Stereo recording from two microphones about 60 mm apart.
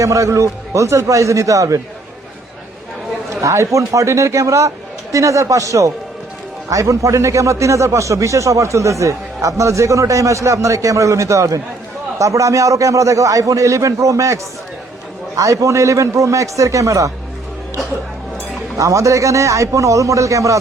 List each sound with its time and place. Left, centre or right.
0.0 s a man's voice: right
3.4 s a man's voice: right
15.4 s a man's voice: right
18.8 s a man's voice: right